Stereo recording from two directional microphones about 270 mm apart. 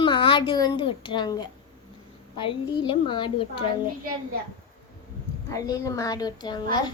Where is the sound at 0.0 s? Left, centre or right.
Centre.